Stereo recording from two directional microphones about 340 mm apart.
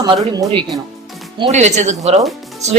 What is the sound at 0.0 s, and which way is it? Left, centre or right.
Speech, centre.